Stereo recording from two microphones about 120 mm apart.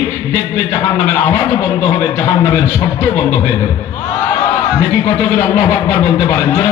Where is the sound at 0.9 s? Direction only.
35° left (ahead or behind).